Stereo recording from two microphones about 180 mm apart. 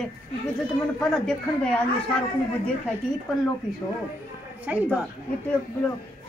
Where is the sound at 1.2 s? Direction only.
5° left (ahead or behind).